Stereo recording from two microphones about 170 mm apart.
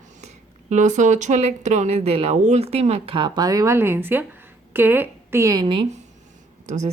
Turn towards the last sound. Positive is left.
turn(degrees=-45)  # may be behind; listen again after turning